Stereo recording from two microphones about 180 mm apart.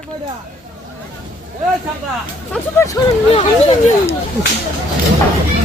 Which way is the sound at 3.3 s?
35° left (ahead or behind).